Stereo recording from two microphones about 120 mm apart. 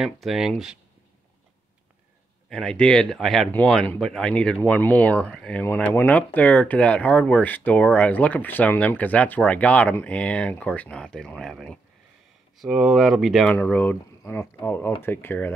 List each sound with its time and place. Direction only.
0.0 s speech: 5° right (ahead or behind)
2.5 s speech: 5° left (ahead or behind)